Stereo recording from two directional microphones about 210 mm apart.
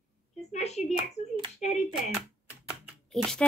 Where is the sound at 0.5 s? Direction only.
30° left (ahead or behind).